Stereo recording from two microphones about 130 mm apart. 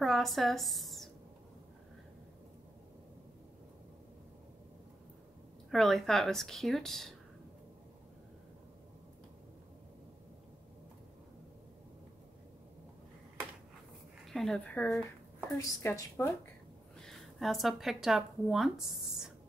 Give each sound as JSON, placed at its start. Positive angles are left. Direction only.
{"t": 0.0, "sound": "a sound", "side_deg": 0}
{"t": 5.7, "sound": "speech", "side_deg": 0}
{"t": 14.2, "sound": "a woman's voice", "side_deg": 0}
{"t": 17.0, "sound": "speech", "side_deg": 0}